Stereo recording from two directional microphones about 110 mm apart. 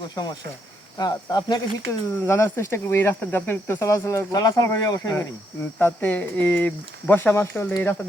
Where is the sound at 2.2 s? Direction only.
25° left (ahead or behind).